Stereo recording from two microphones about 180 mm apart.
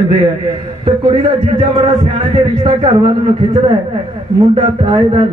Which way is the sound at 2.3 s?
30° right (ahead or behind).